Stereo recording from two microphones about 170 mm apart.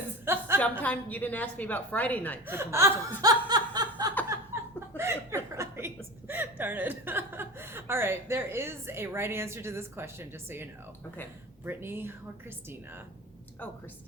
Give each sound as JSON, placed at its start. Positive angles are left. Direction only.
{"t": 0.3, "sound": "a sound", "side_deg": -15}
{"t": 0.6, "sound": "a woman's voice", "side_deg": 10}
{"t": 2.5, "sound": "speech", "side_deg": -15}
{"t": 3.2, "sound": "snicker", "side_deg": -25}
{"t": 4.5, "sound": "chuckle", "side_deg": -15}
{"t": 5.5, "sound": "a sound", "side_deg": -15}
{"t": 6.2, "sound": "speech", "side_deg": -10}